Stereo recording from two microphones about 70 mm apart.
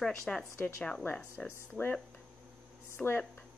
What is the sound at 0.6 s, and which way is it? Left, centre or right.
Speech, left.